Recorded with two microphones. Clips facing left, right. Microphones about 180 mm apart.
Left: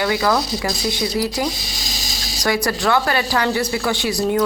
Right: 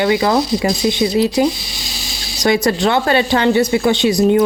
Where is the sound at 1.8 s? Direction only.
40° left (ahead or behind).